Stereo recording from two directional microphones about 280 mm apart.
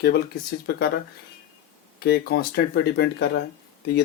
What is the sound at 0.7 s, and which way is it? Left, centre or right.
Speech, left.